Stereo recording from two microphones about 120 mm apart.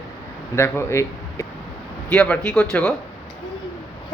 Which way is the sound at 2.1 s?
10° left (ahead or behind).